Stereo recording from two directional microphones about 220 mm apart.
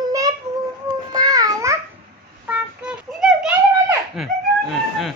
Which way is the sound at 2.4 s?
5° right (ahead or behind).